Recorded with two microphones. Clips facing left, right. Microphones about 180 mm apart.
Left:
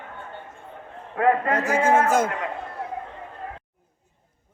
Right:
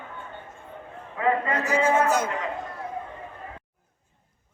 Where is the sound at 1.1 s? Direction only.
55° left (ahead or behind).